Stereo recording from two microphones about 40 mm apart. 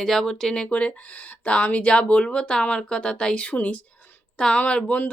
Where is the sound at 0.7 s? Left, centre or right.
Left.